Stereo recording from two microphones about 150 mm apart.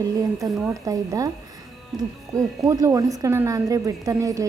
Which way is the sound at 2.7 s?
25° right (ahead or behind).